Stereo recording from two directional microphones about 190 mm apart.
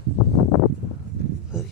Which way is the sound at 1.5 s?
5° right (ahead or behind).